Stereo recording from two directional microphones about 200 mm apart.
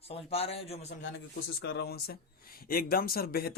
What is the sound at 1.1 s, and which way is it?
Speech, 60° left (ahead or behind).